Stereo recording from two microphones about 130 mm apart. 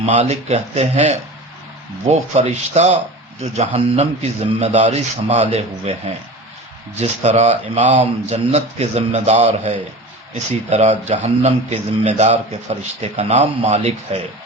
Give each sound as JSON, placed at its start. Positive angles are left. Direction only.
{"t": 0.0, "sound": "speech", "side_deg": -60}
{"t": 2.3, "sound": "speech", "side_deg": -60}
{"t": 7.0, "sound": "speech", "side_deg": -60}